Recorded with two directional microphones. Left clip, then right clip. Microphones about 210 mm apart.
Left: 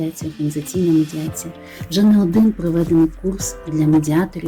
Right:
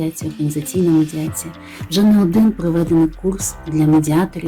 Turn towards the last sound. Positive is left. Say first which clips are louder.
# right 2 dB
turn(degrees=-5)  # may be behind; listen again after turning